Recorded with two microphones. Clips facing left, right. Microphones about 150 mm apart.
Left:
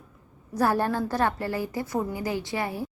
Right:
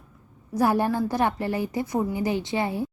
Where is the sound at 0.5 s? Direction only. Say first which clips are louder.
Right 2 dB; 15° right (ahead or behind).